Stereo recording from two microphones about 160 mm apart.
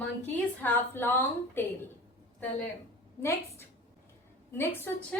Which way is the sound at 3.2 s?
15° left (ahead or behind).